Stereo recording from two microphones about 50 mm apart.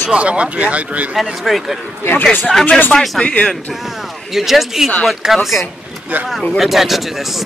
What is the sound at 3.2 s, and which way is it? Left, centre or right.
Speech, left.